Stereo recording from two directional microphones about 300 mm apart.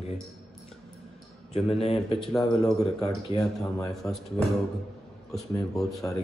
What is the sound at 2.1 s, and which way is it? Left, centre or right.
Speech, centre.